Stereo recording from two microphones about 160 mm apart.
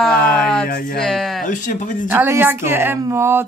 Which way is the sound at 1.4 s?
55° left (ahead or behind).